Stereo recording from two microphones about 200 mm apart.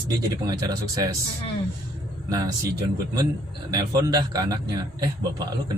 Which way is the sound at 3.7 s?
20° right (ahead or behind).